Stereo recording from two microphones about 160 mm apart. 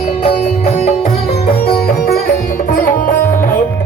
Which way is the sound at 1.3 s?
70° left (ahead or behind).